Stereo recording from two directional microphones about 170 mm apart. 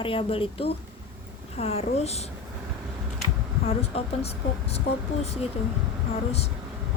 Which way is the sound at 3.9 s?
35° left (ahead or behind).